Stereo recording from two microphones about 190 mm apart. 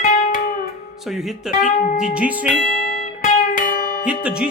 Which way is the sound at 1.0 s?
Centre (ahead or behind).